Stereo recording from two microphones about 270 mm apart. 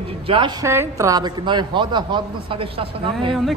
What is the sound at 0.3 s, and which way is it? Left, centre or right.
A woman's voice, centre.